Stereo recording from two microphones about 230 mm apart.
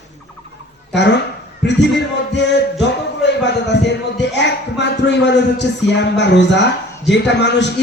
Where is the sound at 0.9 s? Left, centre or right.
Left.